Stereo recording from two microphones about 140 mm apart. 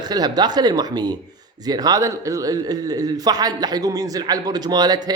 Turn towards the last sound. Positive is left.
turn(degrees=-30)  # may be behind; listen again after turning